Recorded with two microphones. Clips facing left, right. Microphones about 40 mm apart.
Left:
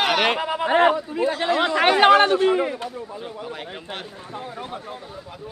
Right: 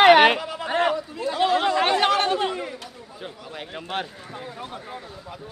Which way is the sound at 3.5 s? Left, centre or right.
Centre.